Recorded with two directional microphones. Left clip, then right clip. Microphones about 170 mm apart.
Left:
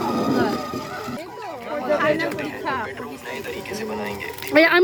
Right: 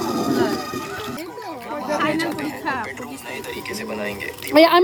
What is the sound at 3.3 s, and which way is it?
Speech, 50° right (ahead or behind).